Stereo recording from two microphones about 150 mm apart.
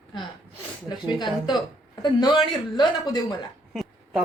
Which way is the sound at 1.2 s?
30° left (ahead or behind).